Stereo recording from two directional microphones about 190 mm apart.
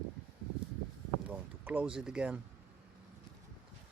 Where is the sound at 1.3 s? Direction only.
10° right (ahead or behind).